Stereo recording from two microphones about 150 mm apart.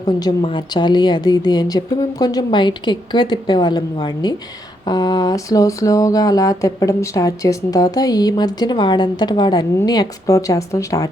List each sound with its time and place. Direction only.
0.0 s speech: 30° left (ahead or behind)